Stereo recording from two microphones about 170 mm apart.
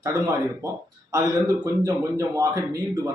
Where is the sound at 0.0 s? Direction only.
20° right (ahead or behind).